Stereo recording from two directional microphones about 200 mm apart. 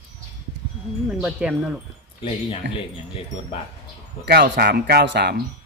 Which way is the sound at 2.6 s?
65° right (ahead or behind).